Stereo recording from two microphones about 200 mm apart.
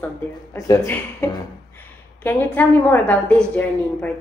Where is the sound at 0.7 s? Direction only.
10° left (ahead or behind).